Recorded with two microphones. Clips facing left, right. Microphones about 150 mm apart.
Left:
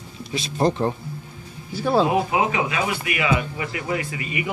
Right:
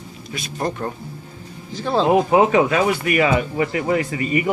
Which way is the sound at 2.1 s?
40° right (ahead or behind).